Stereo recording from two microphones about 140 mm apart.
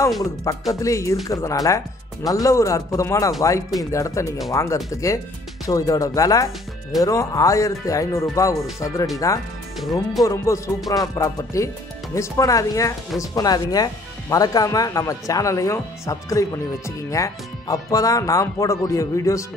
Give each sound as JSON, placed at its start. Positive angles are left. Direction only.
{"t": 0.2, "sound": "speech", "side_deg": 20}
{"t": 9.8, "sound": "speech", "side_deg": 0}
{"t": 10.2, "sound": "speech", "side_deg": 25}